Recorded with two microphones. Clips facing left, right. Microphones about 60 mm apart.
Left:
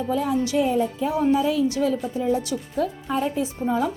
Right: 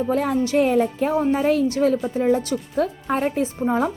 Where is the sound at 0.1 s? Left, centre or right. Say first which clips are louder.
Right 1 dB; right.